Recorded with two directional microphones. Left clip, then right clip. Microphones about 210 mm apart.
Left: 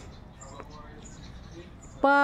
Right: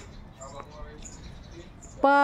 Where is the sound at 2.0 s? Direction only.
Centre (ahead or behind).